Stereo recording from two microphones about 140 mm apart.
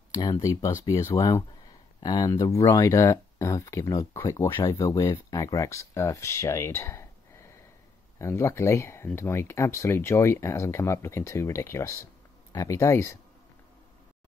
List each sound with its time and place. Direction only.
0.1 s speech: 25° left (ahead or behind)